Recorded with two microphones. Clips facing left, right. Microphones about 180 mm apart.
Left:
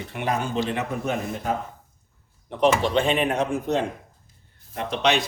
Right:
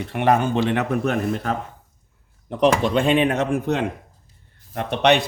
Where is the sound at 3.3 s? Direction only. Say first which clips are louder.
Right 2 dB; 65° right (ahead or behind).